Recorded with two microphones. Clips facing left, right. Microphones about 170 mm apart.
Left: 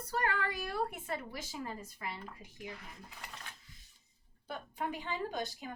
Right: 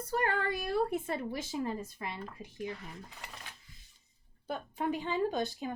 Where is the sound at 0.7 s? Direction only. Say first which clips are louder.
Right 6 dB; 25° right (ahead or behind).